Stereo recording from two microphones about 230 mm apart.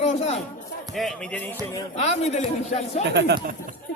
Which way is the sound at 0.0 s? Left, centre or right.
Left.